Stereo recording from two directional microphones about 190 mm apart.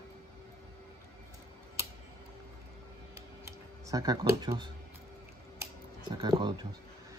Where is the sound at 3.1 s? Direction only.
15° right (ahead or behind).